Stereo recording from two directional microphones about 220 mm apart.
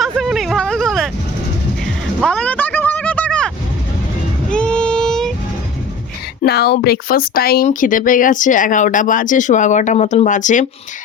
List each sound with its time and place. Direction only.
0.0 s a sound: centre (ahead or behind)
4.4 s vehicle: 5° left (ahead or behind)
6.4 s speech: 45° left (ahead or behind)